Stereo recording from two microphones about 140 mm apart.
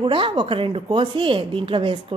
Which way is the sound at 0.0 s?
35° right (ahead or behind).